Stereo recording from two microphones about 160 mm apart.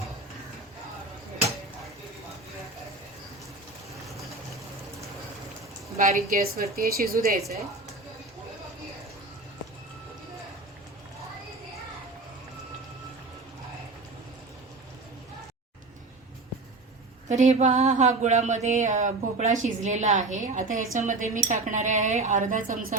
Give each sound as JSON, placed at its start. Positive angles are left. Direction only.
{"t": 6.0, "sound": "a woman's voice", "side_deg": -55}
{"t": 6.3, "sound": "a woman's voice", "side_deg": -70}
{"t": 17.2, "sound": "a sound", "side_deg": -45}